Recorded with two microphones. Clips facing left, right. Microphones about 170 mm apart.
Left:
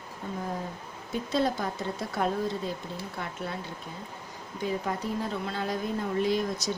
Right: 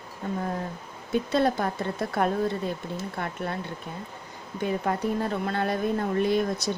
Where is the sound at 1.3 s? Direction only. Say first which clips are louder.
Right 2 dB; 60° right (ahead or behind).